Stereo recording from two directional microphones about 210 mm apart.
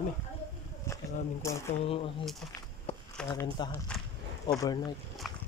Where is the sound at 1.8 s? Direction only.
25° left (ahead or behind).